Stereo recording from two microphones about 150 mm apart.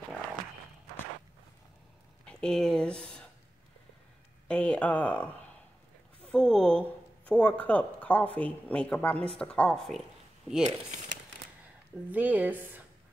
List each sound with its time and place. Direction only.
2.2 s speech: 5° left (ahead or behind)
4.5 s speech: 10° left (ahead or behind)
10.6 s speech: 50° right (ahead or behind)
12.1 s speech: 10° right (ahead or behind)